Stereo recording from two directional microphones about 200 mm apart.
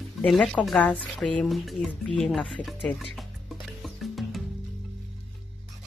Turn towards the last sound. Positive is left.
turn(degrees=0)  # may be behind; listen again after turning